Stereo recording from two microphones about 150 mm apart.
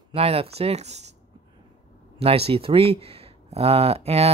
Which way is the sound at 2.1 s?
40° right (ahead or behind).